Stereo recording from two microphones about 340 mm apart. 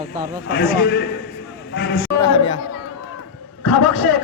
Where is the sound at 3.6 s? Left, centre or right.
Left.